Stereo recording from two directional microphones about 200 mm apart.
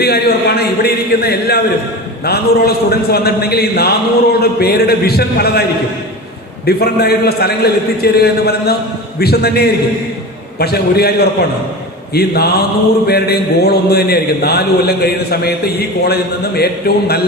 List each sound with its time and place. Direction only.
0.0 s a man's voice: 50° left (ahead or behind)
6.7 s a man's voice: 50° left (ahead or behind)